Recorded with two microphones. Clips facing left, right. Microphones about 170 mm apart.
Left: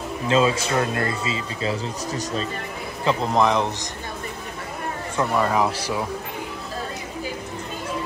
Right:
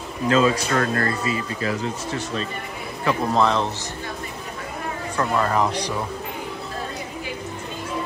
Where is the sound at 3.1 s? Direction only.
20° left (ahead or behind).